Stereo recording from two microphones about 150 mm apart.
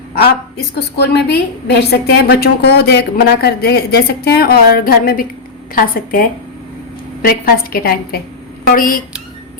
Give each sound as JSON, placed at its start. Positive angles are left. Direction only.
{"t": 0.2, "sound": "a woman's voice", "side_deg": 90}
{"t": 8.6, "sound": "a woman's voice", "side_deg": 65}